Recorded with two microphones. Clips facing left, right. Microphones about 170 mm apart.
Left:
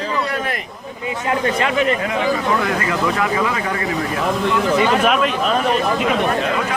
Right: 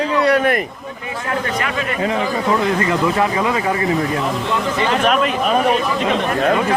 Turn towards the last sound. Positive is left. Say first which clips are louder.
# right 2 dB
turn(degrees=-5)  # may be behind; listen again after turning